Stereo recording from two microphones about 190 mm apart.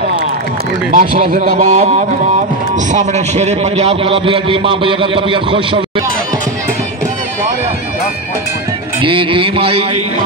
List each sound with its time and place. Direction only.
0.9 s a man's voice: 50° right (ahead or behind); by 6.0 s 25° right (ahead or behind)
9.0 s a man's voice: 25° right (ahead or behind)